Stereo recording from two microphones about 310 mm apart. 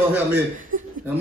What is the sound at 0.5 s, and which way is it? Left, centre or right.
Speech, right.